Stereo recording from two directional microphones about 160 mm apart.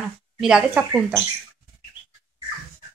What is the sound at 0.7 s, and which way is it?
Speech, 15° right (ahead or behind).